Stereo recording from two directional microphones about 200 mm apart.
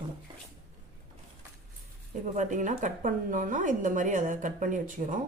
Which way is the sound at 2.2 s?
35° right (ahead or behind).